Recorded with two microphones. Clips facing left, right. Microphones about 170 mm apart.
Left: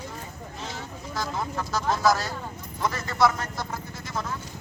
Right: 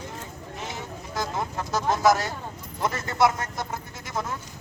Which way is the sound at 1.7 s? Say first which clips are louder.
Right 2 dB; 20° right (ahead or behind).